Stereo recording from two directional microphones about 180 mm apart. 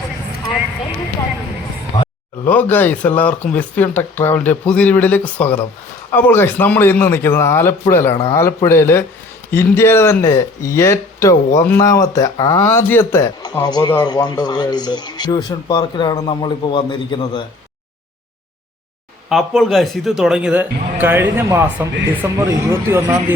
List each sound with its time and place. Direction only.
2.4 s speech: 10° left (ahead or behind); by 17.4 s 25° left (ahead or behind)
19.3 s a man's voice: centre (ahead or behind)